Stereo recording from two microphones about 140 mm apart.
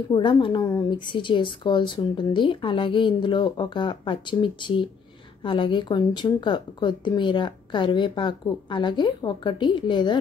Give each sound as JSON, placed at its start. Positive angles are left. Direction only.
{"t": 0.1, "sound": "a woman's voice", "side_deg": 35}